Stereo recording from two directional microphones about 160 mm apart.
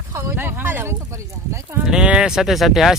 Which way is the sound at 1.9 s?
5° right (ahead or behind).